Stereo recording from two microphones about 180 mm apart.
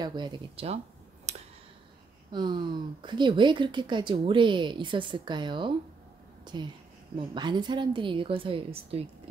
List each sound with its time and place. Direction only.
0.0 s speech: 25° right (ahead or behind)
1.3 s clicking: 40° right (ahead or behind)
2.3 s speech: 25° right (ahead or behind)